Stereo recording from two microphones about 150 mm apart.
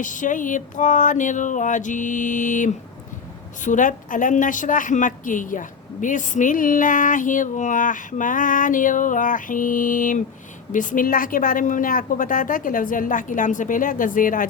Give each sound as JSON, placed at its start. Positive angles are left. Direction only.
{"t": 0.0, "sound": "a woman's voice", "side_deg": 60}